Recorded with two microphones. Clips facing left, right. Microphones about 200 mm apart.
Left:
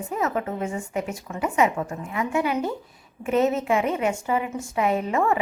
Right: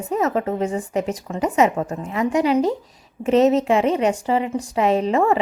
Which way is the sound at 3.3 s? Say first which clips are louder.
Right 6 dB; 80° right.